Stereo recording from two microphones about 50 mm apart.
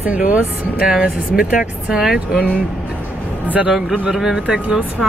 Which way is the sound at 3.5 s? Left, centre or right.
Right.